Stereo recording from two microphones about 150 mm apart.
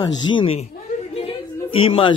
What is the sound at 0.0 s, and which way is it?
Speech, 30° left (ahead or behind).